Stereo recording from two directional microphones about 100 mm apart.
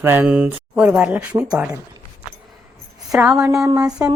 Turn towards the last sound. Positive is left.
turn(degrees=-35)  # may be behind; listen again after turning